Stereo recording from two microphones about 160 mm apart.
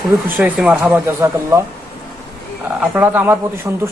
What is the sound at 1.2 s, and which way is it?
Speech, 15° right (ahead or behind).